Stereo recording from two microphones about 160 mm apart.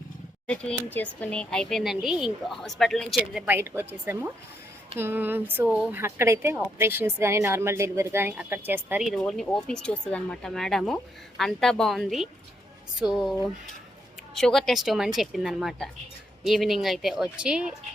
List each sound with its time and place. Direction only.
0.4 s speech: 5° left (ahead or behind)
3.4 s speech: 15° right (ahead or behind)
9.0 s speech: 5° left (ahead or behind)
14.3 s speech: centre (ahead or behind)